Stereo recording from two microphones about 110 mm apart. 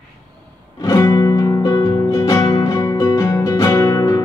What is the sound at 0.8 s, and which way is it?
Music, 30° left (ahead or behind).